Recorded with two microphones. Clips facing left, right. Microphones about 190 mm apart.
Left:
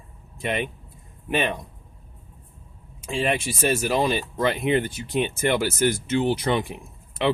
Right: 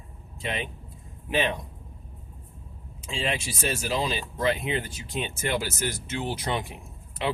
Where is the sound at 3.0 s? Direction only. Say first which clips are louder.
Left 6 dB; 55° left (ahead or behind).